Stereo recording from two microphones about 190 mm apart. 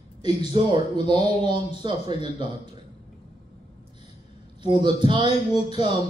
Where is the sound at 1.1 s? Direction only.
25° right (ahead or behind).